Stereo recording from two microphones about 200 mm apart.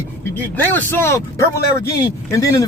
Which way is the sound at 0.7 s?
10° left (ahead or behind).